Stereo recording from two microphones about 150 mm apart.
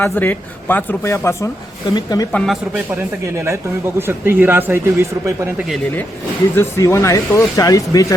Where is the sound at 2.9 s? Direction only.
20° right (ahead or behind).